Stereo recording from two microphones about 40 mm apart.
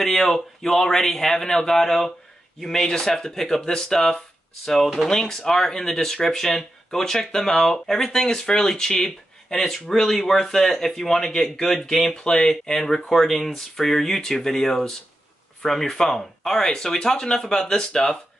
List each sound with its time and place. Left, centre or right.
0.0 s speech: centre
4.8 s speech: centre
5.1 s speech: centre